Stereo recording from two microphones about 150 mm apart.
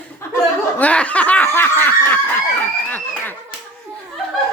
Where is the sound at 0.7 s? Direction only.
10° left (ahead or behind).